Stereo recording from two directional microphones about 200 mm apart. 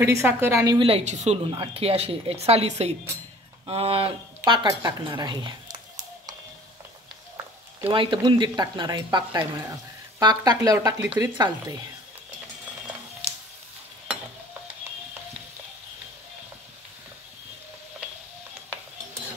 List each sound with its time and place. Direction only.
0.0 s speech: 15° right (ahead or behind)
0.7 s speech: 30° right (ahead or behind)
7.8 s speech: 25° right (ahead or behind)